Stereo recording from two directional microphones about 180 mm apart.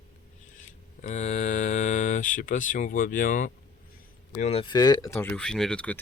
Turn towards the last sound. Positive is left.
turn(degrees=5)  # may be behind; listen again after turning